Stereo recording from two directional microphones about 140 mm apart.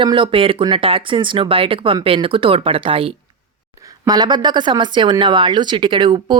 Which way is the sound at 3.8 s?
25° right (ahead or behind).